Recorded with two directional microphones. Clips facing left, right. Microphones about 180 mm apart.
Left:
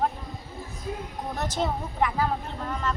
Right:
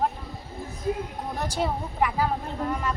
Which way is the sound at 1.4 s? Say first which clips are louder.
Even; 10° right (ahead or behind).